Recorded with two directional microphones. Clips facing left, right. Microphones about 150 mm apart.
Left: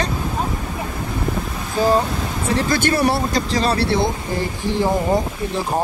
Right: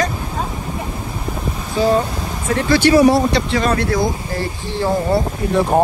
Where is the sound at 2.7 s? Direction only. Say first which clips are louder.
Right 9 dB; 45° left (ahead or behind); by 5.2 s 20° left (ahead or behind).